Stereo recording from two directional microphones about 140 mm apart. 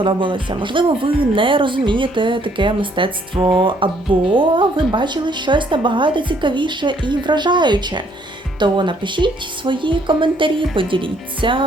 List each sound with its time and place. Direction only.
0.0 s speech: 35° right (ahead or behind)